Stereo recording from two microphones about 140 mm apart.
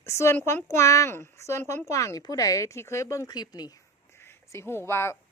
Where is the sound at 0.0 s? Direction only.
20° left (ahead or behind).